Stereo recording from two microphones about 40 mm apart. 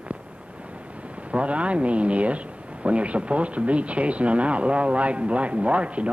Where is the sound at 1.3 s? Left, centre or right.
Right.